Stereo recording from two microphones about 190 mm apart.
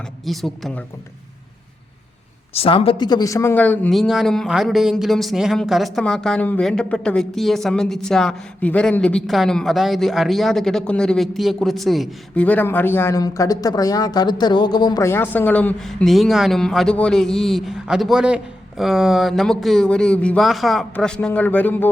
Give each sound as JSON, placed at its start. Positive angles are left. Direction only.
{"t": 0.3, "sound": "speech", "side_deg": 0}
{"t": 2.5, "sound": "speech", "side_deg": 30}